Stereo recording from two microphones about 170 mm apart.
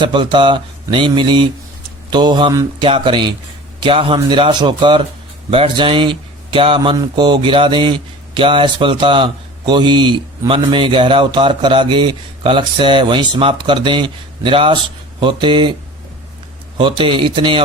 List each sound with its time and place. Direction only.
0.0 s speech: 25° right (ahead or behind)
16.7 s speech: 30° right (ahead or behind)